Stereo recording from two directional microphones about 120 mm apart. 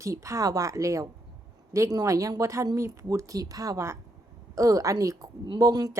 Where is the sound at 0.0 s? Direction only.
25° right (ahead or behind).